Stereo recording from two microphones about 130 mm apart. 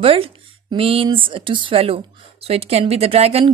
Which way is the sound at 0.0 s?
45° right (ahead or behind).